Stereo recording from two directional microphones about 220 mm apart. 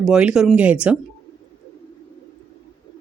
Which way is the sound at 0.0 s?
5° right (ahead or behind).